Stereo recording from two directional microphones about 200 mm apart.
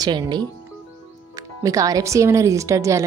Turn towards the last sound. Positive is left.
turn(degrees=-15)  # may be behind; listen again after turning